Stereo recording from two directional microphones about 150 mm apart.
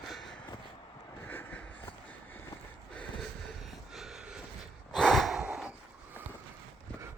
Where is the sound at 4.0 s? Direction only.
5° right (ahead or behind).